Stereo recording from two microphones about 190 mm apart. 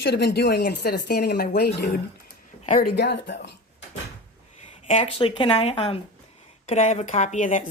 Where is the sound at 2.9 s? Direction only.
65° left (ahead or behind).